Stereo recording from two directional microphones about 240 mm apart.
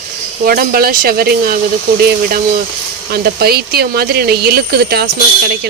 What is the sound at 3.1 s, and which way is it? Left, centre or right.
Speech, right.